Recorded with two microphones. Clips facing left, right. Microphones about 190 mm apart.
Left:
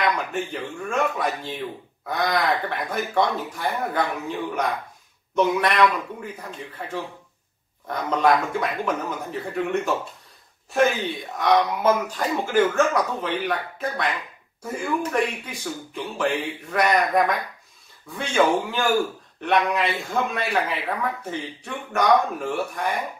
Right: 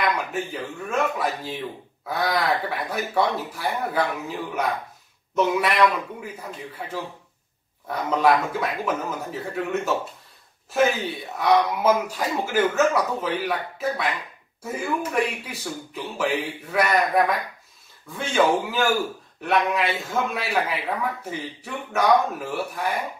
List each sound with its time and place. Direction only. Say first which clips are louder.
0.0 s speech: left 1 dB; 5° right (ahead or behind)
7.9 s speech: even; 5° right (ahead or behind)